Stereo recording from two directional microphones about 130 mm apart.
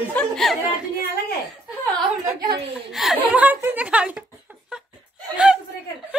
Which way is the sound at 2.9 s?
Centre (ahead or behind).